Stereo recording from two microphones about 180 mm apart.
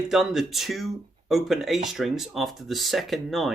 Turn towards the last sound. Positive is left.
turn(degrees=0)  # may be behind; listen again after turning